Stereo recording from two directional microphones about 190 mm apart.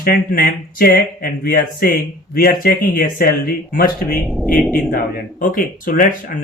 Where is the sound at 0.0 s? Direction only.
50° left (ahead or behind).